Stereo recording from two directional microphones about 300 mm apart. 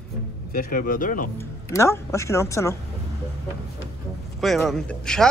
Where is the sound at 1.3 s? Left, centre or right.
Centre.